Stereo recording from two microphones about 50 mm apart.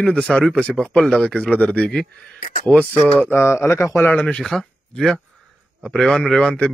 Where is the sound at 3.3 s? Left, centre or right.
Left.